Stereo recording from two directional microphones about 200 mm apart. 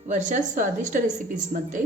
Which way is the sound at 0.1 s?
40° right (ahead or behind).